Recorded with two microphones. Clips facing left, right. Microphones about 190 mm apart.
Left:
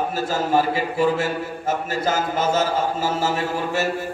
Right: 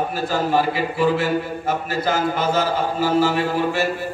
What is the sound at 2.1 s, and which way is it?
Music, 45° left (ahead or behind).